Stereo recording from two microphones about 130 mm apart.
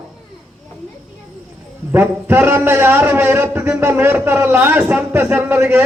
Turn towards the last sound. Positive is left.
turn(degrees=-15)  # may be behind; listen again after turning